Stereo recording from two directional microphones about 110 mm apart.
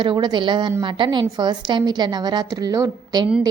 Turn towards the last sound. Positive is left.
turn(degrees=-35)  # may be behind; listen again after turning